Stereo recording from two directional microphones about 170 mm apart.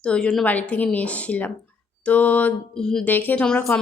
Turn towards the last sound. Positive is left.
turn(degrees=10)  # may be behind; listen again after turning